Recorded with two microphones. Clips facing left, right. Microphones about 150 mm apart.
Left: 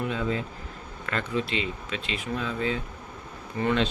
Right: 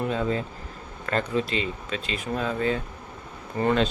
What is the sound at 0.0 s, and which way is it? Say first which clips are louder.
Speech: right 3 dB; 40° right (ahead or behind).